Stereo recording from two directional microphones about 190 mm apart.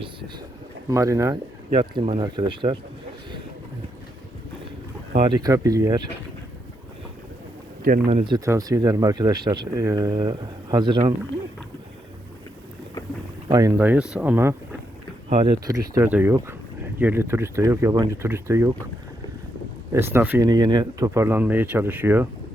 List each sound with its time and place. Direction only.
0.9 s speech: 15° right (ahead or behind)
1.7 s speech: 30° right (ahead or behind)
5.1 s speech: 25° right (ahead or behind)
8.1 s speech: 25° right (ahead or behind)
13.5 s speech: 20° right (ahead or behind)
15.3 s speech: 25° right (ahead or behind)
16.0 s speech: 10° right (ahead or behind)
19.9 s speech: 15° right (ahead or behind)